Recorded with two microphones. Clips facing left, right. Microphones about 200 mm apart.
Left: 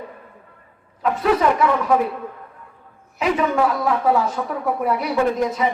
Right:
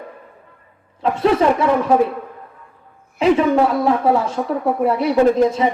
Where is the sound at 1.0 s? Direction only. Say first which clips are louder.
Right 3 dB; 30° right (ahead or behind).